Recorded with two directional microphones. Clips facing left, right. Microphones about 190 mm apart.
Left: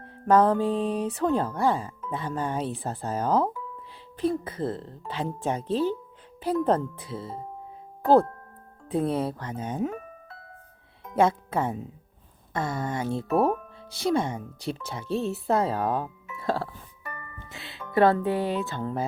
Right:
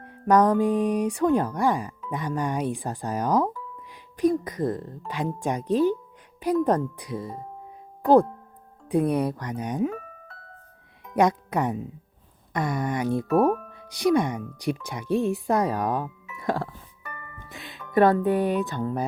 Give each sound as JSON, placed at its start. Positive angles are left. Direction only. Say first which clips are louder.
{"t": 0.3, "sound": "speech", "louder": "right 1 dB", "side_deg": -15}
{"t": 11.1, "sound": "speech", "louder": "right 1 dB", "side_deg": -15}
{"t": 13.3, "sound": "speech", "louder": "right 2 dB", "side_deg": 0}
{"t": 13.7, "sound": "speech", "louder": "right 4 dB", "side_deg": -15}
{"t": 16.4, "sound": "music", "louder": "right 1 dB", "side_deg": -15}
{"t": 17.9, "sound": "speech", "louder": "right 2 dB", "side_deg": -15}